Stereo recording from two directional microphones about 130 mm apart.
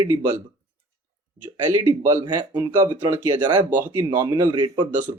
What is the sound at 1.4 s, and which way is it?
Speech, 20° right (ahead or behind).